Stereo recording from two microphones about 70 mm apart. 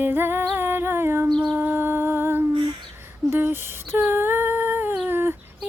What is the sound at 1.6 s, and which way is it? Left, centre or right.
Humming, right.